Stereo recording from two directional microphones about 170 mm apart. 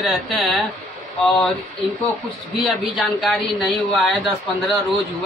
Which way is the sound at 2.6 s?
Centre (ahead or behind).